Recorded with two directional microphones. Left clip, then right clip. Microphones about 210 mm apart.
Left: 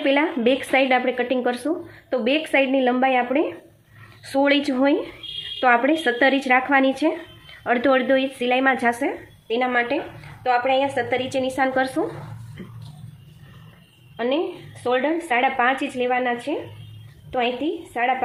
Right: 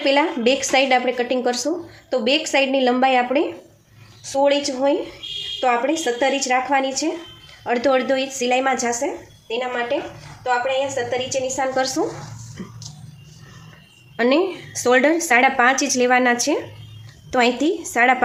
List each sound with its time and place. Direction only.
0.0 s a woman's voice: 5° left (ahead or behind)
4.3 s a woman's voice: 25° left (ahead or behind)
9.5 s a woman's voice: 35° left (ahead or behind)
11.7 s a woman's voice: 10° left (ahead or behind)
14.2 s a woman's voice: 20° right (ahead or behind)